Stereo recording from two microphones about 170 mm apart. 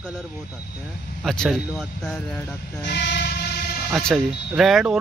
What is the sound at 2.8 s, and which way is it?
Train, 85° left.